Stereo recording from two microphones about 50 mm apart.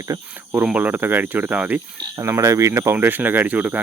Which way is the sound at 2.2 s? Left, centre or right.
Right.